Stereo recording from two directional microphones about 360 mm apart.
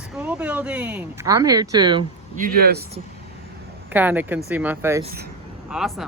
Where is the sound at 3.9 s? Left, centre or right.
Centre.